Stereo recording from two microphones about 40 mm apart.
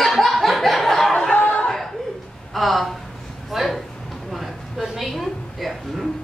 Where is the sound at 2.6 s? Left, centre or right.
Centre.